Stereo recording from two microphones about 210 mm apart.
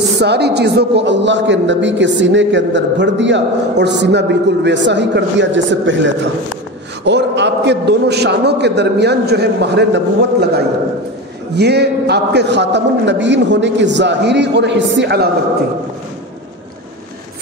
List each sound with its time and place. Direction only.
0.2 s a man's voice: 50° right (ahead or behind)